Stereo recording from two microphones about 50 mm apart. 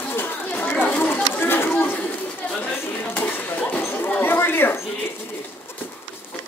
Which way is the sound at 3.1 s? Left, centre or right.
Left.